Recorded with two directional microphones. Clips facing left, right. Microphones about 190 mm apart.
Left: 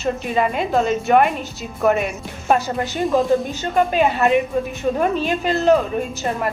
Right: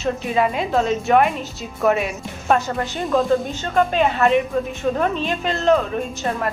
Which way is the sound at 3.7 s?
5° left (ahead or behind).